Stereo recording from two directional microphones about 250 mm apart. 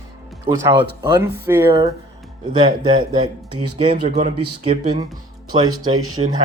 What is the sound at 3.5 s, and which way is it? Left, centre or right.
Speech, right.